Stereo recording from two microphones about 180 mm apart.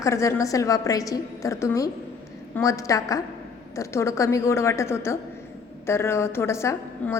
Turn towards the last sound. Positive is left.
turn(degrees=15)  # may be behind; listen again after turning